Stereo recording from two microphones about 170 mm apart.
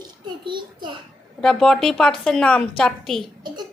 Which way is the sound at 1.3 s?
5° left (ahead or behind).